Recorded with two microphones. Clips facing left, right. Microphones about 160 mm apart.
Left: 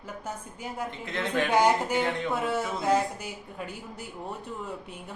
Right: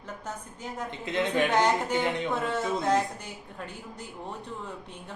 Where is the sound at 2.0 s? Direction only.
20° right (ahead or behind).